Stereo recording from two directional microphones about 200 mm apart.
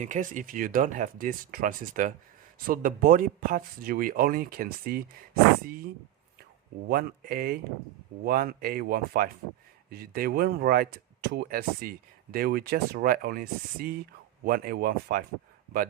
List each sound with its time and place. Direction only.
0.0 s speech: 40° right (ahead or behind)
6.8 s speech: 50° right (ahead or behind)